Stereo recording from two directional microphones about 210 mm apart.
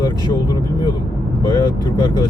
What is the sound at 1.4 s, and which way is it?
Speech, 20° left (ahead or behind).